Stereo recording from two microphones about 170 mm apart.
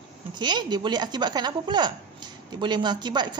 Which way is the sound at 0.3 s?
25° right (ahead or behind).